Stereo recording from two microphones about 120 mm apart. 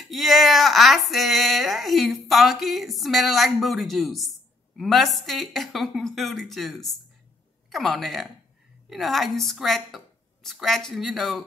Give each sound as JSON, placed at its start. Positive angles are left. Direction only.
{"t": 0.0, "sound": "a woman's voice", "side_deg": 0}